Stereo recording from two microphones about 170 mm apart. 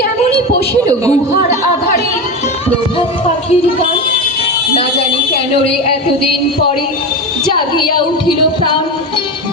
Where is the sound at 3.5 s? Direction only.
35° left (ahead or behind).